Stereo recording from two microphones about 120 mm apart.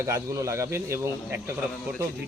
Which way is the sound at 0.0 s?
25° right (ahead or behind).